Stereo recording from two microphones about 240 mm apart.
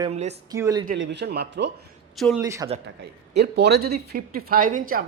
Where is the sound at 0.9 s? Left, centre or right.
Right.